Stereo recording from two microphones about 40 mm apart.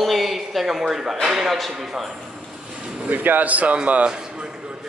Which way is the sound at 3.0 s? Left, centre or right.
Right.